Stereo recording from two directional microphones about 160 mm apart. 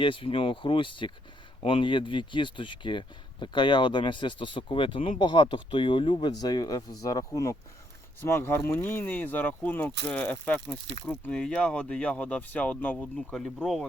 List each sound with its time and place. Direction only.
0.0 s speech: 30° left (ahead or behind); by 13.8 s centre (ahead or behind)